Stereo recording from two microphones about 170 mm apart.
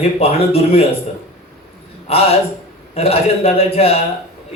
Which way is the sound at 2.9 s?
35° left (ahead or behind).